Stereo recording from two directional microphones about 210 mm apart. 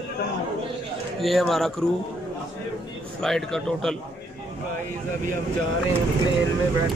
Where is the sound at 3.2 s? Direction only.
Centre (ahead or behind).